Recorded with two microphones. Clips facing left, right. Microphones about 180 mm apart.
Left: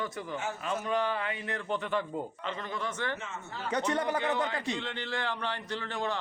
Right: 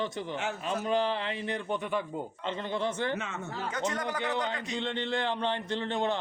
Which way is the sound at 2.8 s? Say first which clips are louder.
Right 6 dB; 30° right (ahead or behind).